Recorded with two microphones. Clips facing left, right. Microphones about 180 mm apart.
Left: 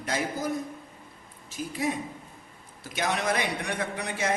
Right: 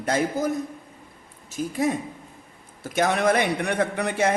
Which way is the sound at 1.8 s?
45° right (ahead or behind).